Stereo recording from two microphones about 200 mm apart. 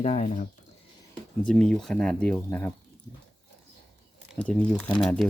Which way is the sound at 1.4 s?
5° left (ahead or behind).